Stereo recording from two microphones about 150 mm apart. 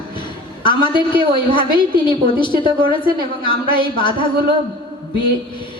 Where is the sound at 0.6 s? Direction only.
30° left (ahead or behind).